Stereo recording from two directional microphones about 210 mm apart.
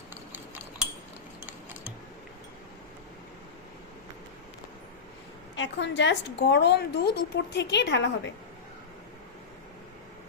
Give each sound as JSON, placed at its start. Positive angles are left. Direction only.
{"t": 0.1, "sound": "scissors", "side_deg": -10}
{"t": 5.5, "sound": "a woman's voice", "side_deg": 60}